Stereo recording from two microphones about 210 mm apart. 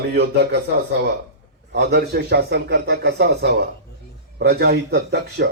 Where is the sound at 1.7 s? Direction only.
55° right (ahead or behind).